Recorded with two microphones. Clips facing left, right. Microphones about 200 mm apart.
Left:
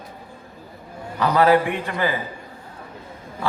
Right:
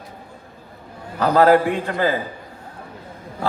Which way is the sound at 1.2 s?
45° right (ahead or behind).